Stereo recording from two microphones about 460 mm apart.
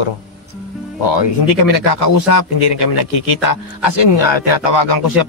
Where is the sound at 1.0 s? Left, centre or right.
Left.